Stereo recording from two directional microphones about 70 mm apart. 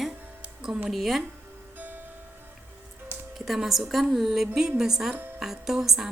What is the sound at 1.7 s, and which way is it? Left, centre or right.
Music, right.